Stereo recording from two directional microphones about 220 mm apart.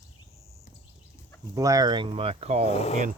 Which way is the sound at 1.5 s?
15° right (ahead or behind).